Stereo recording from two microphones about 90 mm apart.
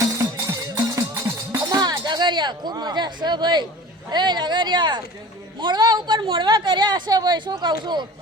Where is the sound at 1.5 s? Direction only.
45° right (ahead or behind).